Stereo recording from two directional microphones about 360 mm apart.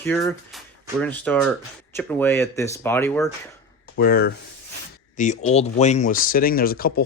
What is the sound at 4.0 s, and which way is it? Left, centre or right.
Speech, left.